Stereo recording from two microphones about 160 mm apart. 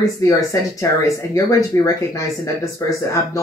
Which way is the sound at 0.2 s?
20° left (ahead or behind).